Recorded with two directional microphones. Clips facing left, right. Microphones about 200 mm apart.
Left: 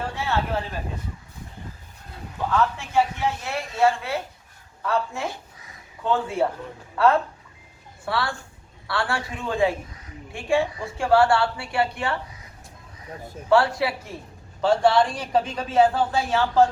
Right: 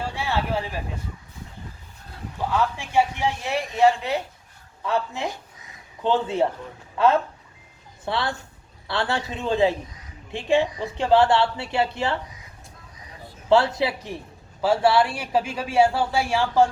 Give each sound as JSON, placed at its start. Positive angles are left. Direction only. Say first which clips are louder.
{"t": 0.2, "sound": "a sound", "louder": "even", "side_deg": -15}
{"t": 2.5, "sound": "a woman's voice", "louder": "left 1 dB", "side_deg": -15}
{"t": 13.5, "sound": "a woman's voice", "louder": "right 1 dB", "side_deg": -20}
{"t": 14.6, "sound": "speech", "louder": "even", "side_deg": -5}